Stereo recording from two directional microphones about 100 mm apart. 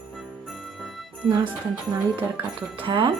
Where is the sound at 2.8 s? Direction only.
60° right (ahead or behind).